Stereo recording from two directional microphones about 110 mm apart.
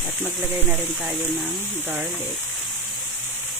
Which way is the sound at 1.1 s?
20° right (ahead or behind).